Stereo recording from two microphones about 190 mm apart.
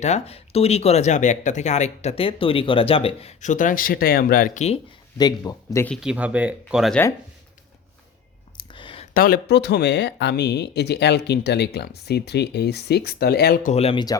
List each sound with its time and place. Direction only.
0.0 s speech: 35° left (ahead or behind); by 4.6 s 50° left (ahead or behind)
5.1 s speech: 20° left (ahead or behind)
5.9 s speech: 5° right (ahead or behind)
8.5 s a sound: 25° left (ahead or behind)
9.1 s speech: 50° left (ahead or behind); by 14.0 s 35° left (ahead or behind)